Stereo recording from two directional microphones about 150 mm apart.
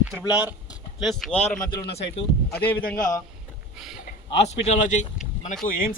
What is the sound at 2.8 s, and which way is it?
Speech, 75° left (ahead or behind).